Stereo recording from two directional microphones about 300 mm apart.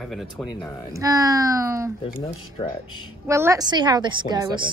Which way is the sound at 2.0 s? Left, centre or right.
Centre.